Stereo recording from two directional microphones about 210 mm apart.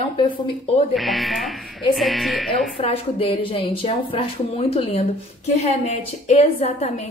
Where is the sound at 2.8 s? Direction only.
25° left (ahead or behind).